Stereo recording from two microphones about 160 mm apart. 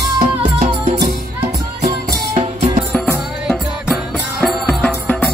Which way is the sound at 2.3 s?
45° right (ahead or behind).